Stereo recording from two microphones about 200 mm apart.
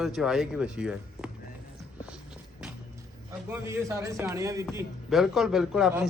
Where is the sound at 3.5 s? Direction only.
15° right (ahead or behind).